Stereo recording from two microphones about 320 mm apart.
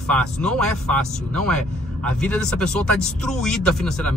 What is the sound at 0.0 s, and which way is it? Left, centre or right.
Speech, centre.